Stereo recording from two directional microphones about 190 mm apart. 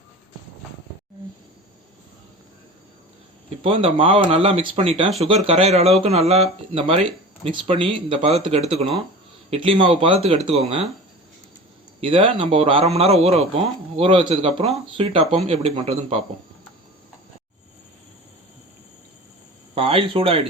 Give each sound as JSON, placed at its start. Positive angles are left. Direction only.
{"t": 3.6, "sound": "speech", "side_deg": -30}
{"t": 11.9, "sound": "speech", "side_deg": -30}
{"t": 19.7, "sound": "speech", "side_deg": -30}